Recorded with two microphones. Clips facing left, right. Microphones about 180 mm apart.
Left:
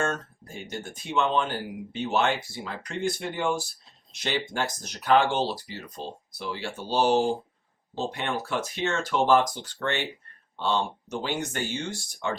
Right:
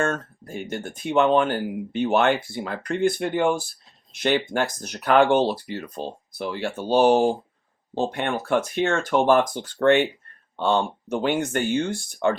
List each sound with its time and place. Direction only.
0.0 s speech: 55° right (ahead or behind)